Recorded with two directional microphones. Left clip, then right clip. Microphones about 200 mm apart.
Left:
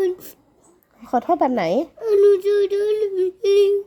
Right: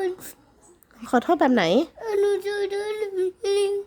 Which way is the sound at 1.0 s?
25° right (ahead or behind).